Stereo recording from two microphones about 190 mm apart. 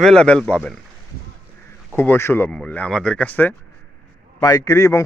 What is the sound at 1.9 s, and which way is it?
A man's voice, 10° left (ahead or behind).